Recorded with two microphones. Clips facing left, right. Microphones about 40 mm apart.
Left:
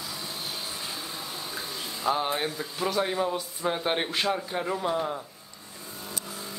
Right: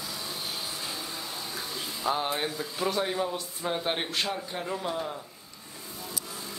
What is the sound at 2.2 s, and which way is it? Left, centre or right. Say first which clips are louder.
Speech: left 1 dB; centre.